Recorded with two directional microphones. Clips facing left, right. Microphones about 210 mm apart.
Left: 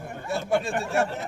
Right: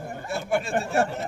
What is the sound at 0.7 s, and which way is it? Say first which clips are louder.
Speech: right 2 dB; 35° right (ahead or behind).